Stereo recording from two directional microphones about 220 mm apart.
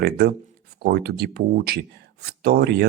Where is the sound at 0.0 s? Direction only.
45° right (ahead or behind).